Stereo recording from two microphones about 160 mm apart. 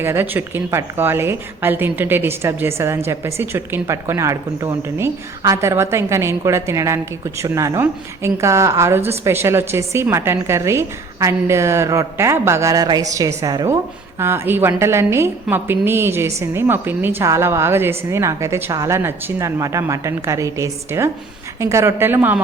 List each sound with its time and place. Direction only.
0.0 s a woman's voice: 15° right (ahead or behind)